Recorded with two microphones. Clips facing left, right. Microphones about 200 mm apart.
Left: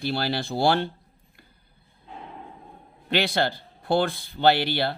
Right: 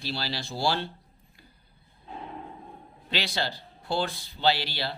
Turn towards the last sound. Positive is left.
turn(degrees=55)  # may be behind; listen again after turning